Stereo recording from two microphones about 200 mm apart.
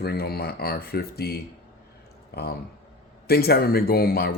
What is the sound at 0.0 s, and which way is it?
Speech, 50° left (ahead or behind).